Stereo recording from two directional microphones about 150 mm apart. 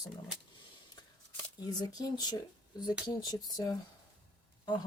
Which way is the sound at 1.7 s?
25° left (ahead or behind).